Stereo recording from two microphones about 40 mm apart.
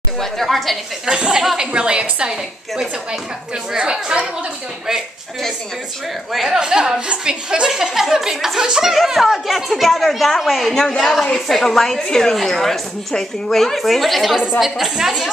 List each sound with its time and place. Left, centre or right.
0.2 s a woman's voice: centre
1.0 s a woman's voice: centre
3.7 s a woman's voice: right
6.3 s a woman's voice: centre
8.9 s a woman's voice: centre
10.7 s a woman's voice: centre
14.6 s speech: centre